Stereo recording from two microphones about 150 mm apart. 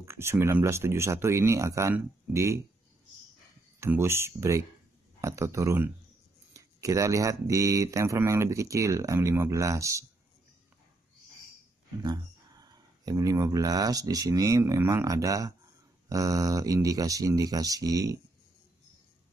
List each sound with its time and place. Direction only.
0.0 s speech: 15° right (ahead or behind)
3.8 s speech: 15° right (ahead or behind)
12.0 s speech: 30° right (ahead or behind)